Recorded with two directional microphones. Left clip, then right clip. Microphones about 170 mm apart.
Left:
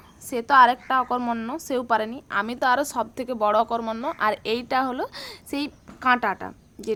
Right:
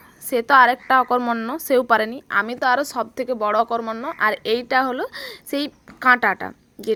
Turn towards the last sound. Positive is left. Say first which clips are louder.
# right 5 dB
turn(degrees=-20)  # may be behind; listen again after turning